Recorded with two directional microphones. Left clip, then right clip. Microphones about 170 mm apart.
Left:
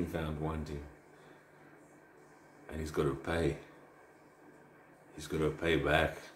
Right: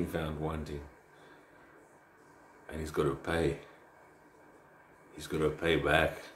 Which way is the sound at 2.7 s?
5° right (ahead or behind).